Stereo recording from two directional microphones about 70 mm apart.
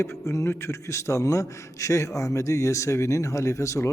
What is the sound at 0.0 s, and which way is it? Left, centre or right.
A man's voice, left.